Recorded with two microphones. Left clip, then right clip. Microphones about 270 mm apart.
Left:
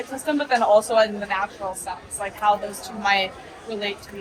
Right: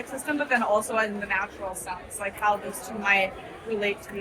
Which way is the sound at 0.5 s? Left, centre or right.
Left.